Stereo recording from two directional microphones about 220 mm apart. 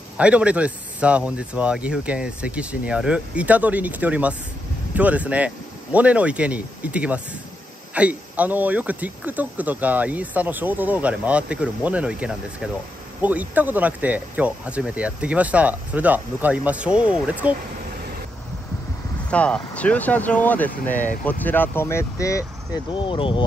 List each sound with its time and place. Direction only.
0.2 s speech: 5° right (ahead or behind)
19.3 s speech: 5° left (ahead or behind); by 23.4 s 25° left (ahead or behind)